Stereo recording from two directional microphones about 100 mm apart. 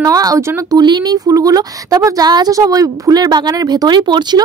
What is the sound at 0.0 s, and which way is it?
Speech, 35° right (ahead or behind).